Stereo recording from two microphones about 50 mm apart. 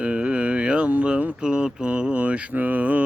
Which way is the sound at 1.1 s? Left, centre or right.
Centre.